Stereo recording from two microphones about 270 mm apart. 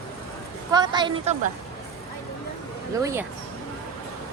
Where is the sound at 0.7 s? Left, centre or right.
Centre.